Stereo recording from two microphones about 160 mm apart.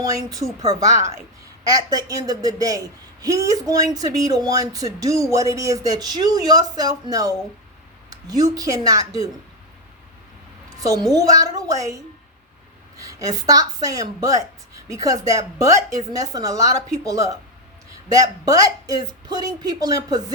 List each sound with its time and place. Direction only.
0.0 s speech: 20° right (ahead or behind)
10.8 s a woman's voice: 20° right (ahead or behind)
13.0 s a woman's voice: 20° right (ahead or behind)